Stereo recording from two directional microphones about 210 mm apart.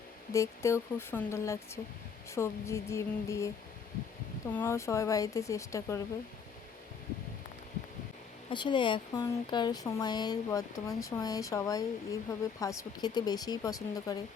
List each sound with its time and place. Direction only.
0.3 s speech: 15° left (ahead or behind)
4.5 s speech: 10° left (ahead or behind)
8.4 s speech: 20° left (ahead or behind)